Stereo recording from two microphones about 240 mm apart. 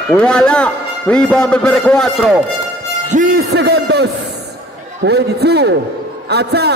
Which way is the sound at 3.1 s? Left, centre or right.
Right.